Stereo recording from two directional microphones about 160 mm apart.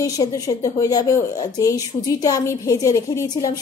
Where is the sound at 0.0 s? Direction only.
20° left (ahead or behind).